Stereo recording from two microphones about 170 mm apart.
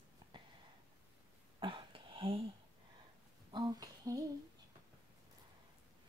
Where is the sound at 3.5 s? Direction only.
25° right (ahead or behind).